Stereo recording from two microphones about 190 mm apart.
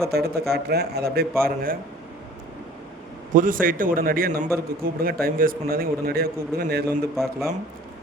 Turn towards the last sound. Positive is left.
turn(degrees=0)  # may be behind; listen again after turning